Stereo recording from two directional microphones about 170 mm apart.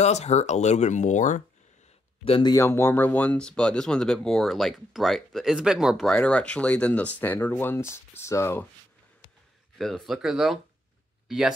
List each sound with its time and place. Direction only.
0.0 s speech: 40° left (ahead or behind)
2.2 s speech: 30° left (ahead or behind)
2.5 s speech: 15° left (ahead or behind)
9.8 s speech: centre (ahead or behind)